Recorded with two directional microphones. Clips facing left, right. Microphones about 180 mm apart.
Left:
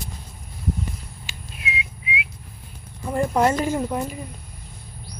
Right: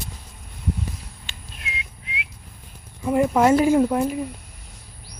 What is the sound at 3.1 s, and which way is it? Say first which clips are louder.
Speech: right 3 dB; 5° right (ahead or behind).